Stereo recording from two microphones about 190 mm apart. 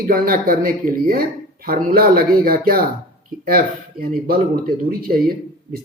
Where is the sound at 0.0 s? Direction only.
50° right (ahead or behind).